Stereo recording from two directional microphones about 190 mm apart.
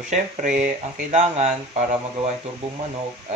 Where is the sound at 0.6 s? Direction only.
35° right (ahead or behind).